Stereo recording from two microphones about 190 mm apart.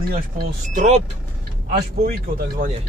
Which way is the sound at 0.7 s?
35° right (ahead or behind).